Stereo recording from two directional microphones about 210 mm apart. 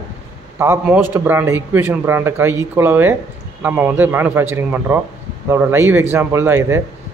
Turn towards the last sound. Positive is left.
turn(degrees=-10)  # may be behind; listen again after turning